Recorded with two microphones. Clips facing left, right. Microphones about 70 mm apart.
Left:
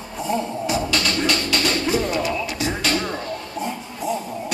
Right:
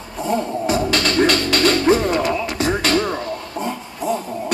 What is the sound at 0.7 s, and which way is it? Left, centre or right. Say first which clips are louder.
Music: right 4 dB; right.